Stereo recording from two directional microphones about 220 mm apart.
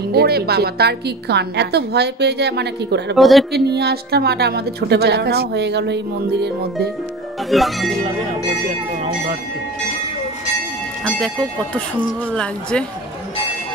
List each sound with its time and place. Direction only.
0.1 s a woman's voice: 45° right (ahead or behind)
3.2 s speech: centre (ahead or behind)
3.5 s a woman's voice: 50° right (ahead or behind)
7.5 s speech: centre (ahead or behind)